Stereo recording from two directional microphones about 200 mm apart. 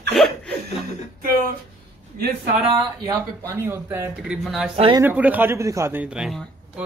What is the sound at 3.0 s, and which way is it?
A man's voice, 15° right (ahead or behind).